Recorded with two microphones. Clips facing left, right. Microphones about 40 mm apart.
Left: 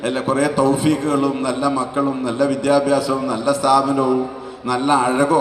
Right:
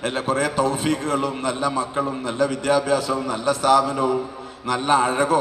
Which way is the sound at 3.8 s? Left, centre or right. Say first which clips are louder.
Left 4 dB; left.